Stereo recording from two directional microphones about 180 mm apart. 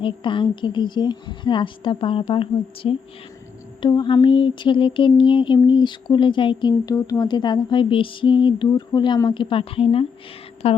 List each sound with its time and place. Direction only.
0.0 s mantra: 25° left (ahead or behind)
10.6 s speech: 35° left (ahead or behind)